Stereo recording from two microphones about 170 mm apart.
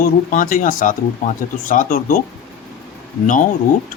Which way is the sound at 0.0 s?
55° left (ahead or behind).